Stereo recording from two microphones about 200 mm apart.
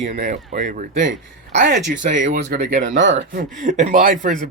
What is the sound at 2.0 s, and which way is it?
Speech, 45° right (ahead or behind).